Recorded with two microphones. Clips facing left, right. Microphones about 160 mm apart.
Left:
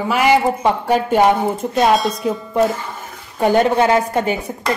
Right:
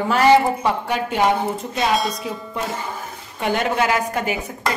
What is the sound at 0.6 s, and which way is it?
A woman's voice, 40° left (ahead or behind).